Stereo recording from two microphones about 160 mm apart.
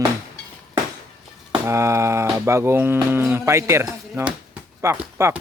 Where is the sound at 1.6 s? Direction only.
15° right (ahead or behind).